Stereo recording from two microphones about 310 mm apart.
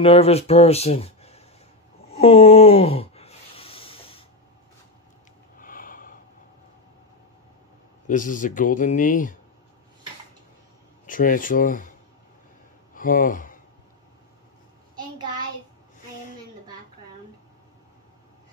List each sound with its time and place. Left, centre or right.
0.0 s speech: centre
2.1 s a sound: centre
5.6 s snort: left
8.1 s speech: left
11.1 s speech: left
12.9 s speech: left
15.0 s a sound: centre